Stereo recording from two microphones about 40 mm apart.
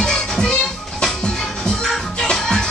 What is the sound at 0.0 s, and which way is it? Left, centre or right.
Music, centre.